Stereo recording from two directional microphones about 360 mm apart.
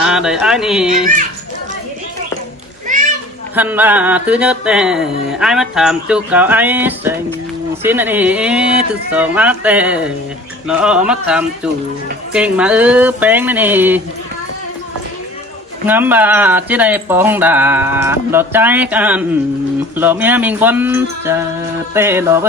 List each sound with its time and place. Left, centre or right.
0.0 s speech: centre
2.8 s a sound: right
3.5 s speech: centre
15.9 s speech: centre
21.9 s music: centre